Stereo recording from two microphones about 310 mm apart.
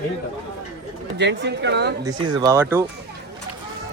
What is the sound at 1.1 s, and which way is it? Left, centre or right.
Speech, right.